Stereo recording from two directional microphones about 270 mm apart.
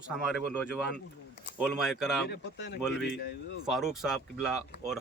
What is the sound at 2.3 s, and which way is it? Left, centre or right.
Speech, left.